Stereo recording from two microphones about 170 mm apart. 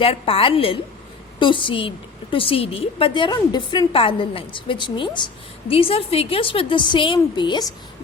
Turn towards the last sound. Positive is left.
turn(degrees=25)  # may be behind; listen again after turning